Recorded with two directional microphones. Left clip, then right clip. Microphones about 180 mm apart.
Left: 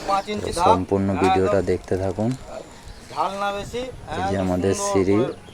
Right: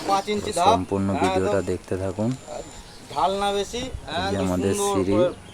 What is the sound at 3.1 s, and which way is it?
Speech, 50° right (ahead or behind).